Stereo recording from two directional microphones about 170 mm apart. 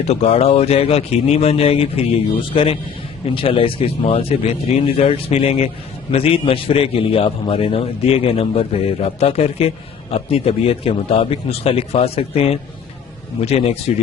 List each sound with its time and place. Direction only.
0.1 s speech: 40° left (ahead or behind)